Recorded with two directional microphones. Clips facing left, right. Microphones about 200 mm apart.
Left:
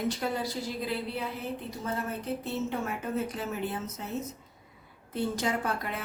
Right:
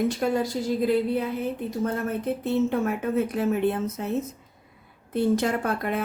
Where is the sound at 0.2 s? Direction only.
50° right (ahead or behind).